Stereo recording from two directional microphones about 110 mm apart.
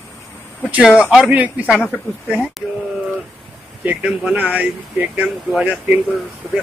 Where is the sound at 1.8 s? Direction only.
10° left (ahead or behind).